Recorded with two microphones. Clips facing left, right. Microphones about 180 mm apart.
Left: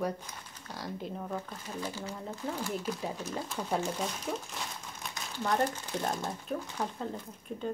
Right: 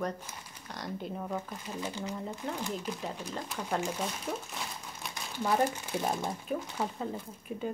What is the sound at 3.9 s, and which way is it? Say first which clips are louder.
Speech: even; centre (ahead or behind).